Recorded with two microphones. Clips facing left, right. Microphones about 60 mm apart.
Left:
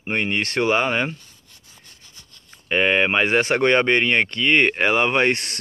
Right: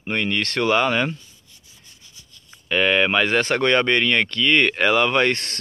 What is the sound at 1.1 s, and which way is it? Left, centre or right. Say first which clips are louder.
Rub: right 1 dB; left.